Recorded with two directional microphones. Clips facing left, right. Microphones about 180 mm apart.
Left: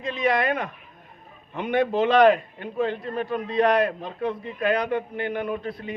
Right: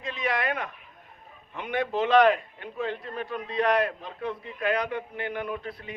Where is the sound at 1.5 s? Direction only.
30° left (ahead or behind).